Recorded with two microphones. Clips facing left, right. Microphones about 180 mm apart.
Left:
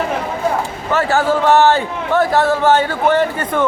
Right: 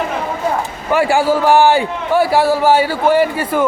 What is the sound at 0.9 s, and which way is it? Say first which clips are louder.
A man's voice: right 2 dB; 10° right (ahead or behind).